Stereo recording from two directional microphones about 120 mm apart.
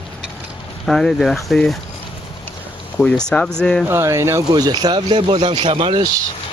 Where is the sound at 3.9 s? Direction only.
20° right (ahead or behind); by 6.1 s 45° right (ahead or behind).